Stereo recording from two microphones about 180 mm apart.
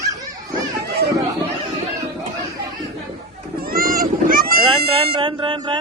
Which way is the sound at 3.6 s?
55° right (ahead or behind).